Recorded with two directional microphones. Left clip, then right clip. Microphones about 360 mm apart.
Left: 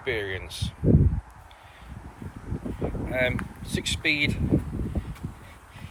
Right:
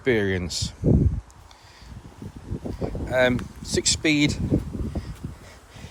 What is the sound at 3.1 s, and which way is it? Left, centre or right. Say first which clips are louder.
Speech: right 6 dB; right.